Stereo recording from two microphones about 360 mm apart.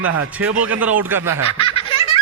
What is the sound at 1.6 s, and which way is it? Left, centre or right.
Baby laughter, centre.